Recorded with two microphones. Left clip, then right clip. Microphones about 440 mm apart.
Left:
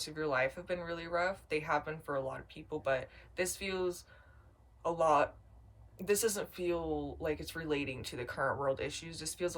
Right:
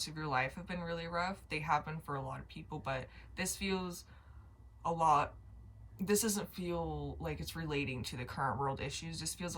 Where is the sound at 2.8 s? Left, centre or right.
Centre.